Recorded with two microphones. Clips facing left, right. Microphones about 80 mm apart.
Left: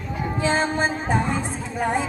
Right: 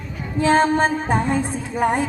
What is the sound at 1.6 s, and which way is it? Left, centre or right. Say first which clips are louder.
Speech: right 3 dB; right.